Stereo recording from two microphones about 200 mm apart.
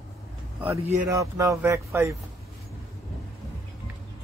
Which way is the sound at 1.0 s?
15° right (ahead or behind).